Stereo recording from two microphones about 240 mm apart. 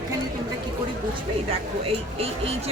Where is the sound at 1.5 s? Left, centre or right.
Right.